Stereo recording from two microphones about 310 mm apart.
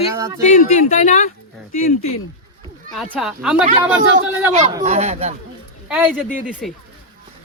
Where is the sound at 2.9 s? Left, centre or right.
Centre.